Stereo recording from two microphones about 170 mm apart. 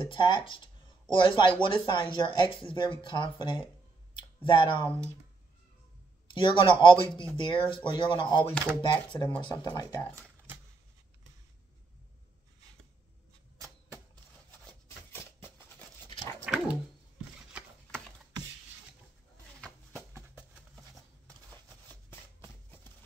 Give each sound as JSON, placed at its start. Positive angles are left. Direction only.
{"t": 0.1, "sound": "speech", "side_deg": 25}
{"t": 4.1, "sound": "clicking", "side_deg": 30}
{"t": 4.8, "sound": "speech", "side_deg": -15}
{"t": 6.2, "sound": "speech", "side_deg": 30}
{"t": 16.4, "sound": "dog", "side_deg": -5}
{"t": 19.9, "sound": "a sound", "side_deg": -15}